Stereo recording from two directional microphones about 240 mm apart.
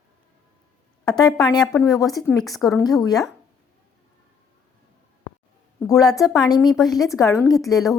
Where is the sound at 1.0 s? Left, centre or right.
Centre.